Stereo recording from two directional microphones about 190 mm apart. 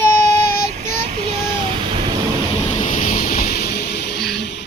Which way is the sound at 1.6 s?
30° right (ahead or behind).